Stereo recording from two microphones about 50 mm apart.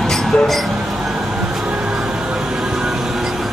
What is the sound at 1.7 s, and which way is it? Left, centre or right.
Music, right.